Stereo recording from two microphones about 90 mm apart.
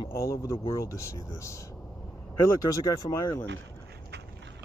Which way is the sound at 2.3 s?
35° left (ahead or behind).